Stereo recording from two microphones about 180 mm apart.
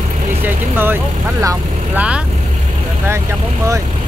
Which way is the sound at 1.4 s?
20° right (ahead or behind).